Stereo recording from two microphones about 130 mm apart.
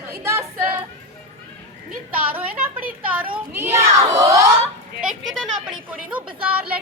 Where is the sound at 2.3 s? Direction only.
15° right (ahead or behind).